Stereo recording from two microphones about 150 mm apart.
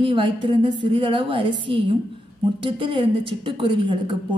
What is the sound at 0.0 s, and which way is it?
A woman's voice, 35° right (ahead or behind).